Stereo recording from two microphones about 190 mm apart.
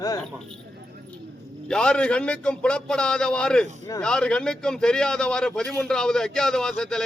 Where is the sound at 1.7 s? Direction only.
5° left (ahead or behind).